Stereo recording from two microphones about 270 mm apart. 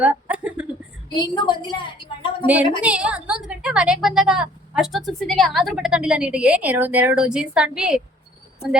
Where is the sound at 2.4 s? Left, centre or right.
Centre.